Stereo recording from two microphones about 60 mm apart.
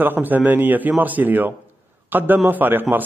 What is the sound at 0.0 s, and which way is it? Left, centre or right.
A man's voice, right.